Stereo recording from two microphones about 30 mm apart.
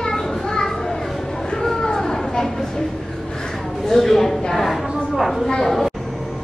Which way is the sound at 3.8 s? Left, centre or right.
Centre.